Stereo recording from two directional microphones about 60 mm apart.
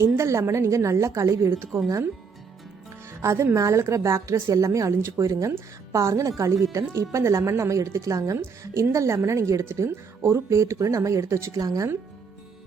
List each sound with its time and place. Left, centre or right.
0.0 s a woman's voice: right
3.2 s a woman's voice: right
5.1 s a woman's voice: right
11.5 s speech: right